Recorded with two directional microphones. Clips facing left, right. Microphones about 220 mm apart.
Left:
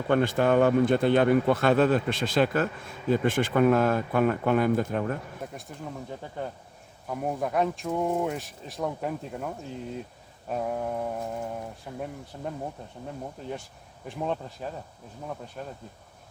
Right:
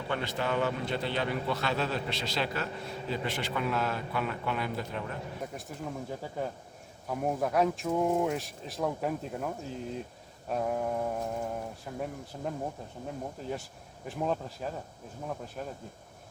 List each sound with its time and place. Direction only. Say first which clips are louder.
0.1 s a man's voice: left 10 dB; 50° left (ahead or behind)
5.4 s speech: even; centre (ahead or behind)
10.5 s speech: left 1 dB; centre (ahead or behind)
14.1 s speech: left 1 dB; centre (ahead or behind)